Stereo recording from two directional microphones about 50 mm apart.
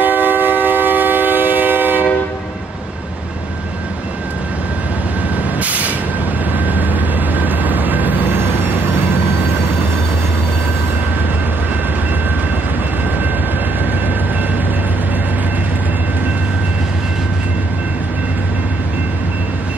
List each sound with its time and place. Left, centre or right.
0.0 s train: right
5.6 s vehicle: right
6.5 s train: right